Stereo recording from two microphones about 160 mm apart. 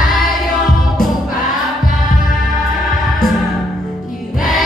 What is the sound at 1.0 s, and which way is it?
Choir, 60° left (ahead or behind).